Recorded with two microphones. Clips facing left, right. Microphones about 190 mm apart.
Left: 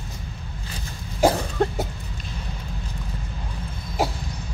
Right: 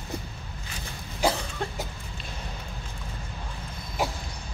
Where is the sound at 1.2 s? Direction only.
45° left (ahead or behind).